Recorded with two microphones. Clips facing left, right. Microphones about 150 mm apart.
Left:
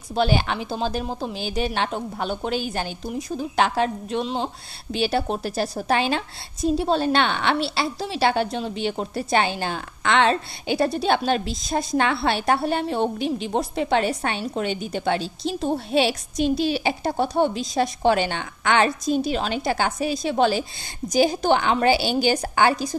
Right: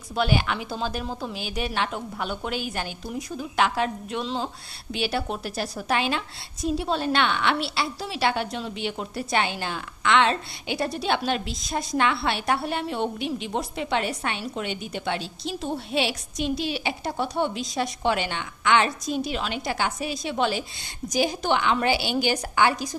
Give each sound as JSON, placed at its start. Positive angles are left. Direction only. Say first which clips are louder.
{"t": 0.1, "sound": "a woman's voice", "louder": "left 3 dB", "side_deg": 30}
{"t": 4.2, "sound": "speech", "louder": "left 3 dB", "side_deg": 20}
{"t": 4.9, "sound": "a woman's voice", "louder": "left 4 dB", "side_deg": 30}